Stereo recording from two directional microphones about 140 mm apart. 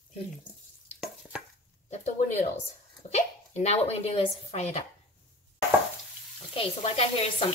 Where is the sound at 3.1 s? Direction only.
55° left (ahead or behind).